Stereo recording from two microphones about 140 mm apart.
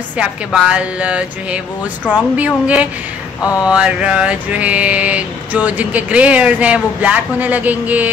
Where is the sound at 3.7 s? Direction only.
5° right (ahead or behind).